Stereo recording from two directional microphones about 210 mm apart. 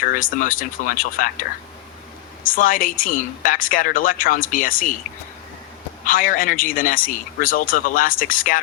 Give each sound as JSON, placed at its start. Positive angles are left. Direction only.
{"t": 0.0, "sound": "a woman's voice", "side_deg": 40}
{"t": 6.1, "sound": "a woman's voice", "side_deg": 40}